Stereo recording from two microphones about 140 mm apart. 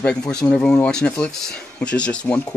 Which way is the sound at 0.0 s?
5° left (ahead or behind).